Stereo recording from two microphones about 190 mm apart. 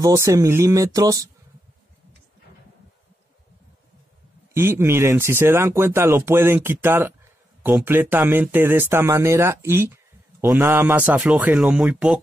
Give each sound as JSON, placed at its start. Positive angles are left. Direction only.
{"t": 0.0, "sound": "speech", "side_deg": -15}
{"t": 4.6, "sound": "speech", "side_deg": -15}